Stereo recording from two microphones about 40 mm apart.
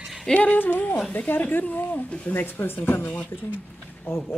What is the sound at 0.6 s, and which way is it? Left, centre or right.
Speech, left.